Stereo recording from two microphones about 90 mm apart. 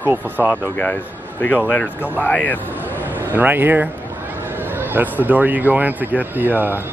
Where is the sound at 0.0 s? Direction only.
20° right (ahead or behind).